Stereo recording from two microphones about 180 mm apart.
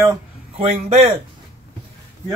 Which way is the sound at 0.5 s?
35° right (ahead or behind).